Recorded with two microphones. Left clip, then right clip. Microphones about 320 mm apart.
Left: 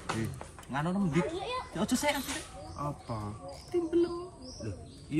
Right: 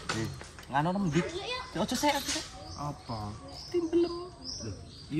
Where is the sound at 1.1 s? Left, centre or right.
Centre.